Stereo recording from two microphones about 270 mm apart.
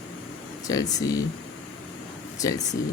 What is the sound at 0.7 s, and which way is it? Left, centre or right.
Speech, centre.